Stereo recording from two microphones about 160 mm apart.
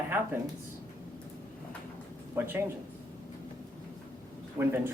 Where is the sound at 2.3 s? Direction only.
15° right (ahead or behind).